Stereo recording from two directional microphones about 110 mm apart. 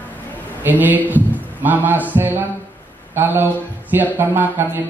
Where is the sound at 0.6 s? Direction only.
15° right (ahead or behind).